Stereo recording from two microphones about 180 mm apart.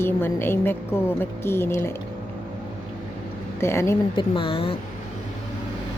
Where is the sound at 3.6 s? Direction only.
15° left (ahead or behind).